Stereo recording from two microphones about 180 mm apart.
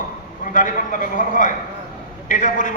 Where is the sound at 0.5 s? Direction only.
45° left (ahead or behind).